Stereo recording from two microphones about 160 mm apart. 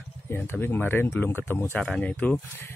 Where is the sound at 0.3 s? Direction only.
15° left (ahead or behind).